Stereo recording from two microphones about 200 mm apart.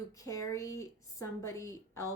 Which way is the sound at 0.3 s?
15° left (ahead or behind).